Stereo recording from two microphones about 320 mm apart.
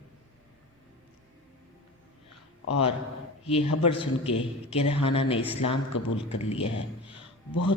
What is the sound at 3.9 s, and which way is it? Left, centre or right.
A woman's voice, centre.